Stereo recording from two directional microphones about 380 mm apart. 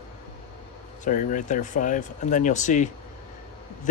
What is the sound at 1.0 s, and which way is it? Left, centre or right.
Speech, centre.